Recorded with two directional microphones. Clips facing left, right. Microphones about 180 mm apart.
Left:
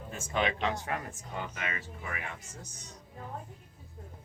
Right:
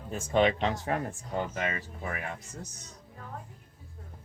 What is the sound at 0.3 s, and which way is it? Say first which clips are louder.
A woman's voice: right 5 dB; 35° right (ahead or behind).